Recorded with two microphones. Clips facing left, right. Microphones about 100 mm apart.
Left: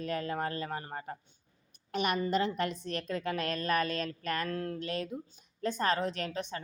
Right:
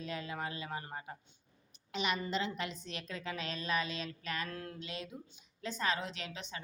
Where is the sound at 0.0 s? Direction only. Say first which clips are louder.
Left 6 dB; 50° left (ahead or behind).